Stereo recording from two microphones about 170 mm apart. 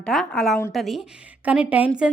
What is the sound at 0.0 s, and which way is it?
A woman's voice, 5° left (ahead or behind).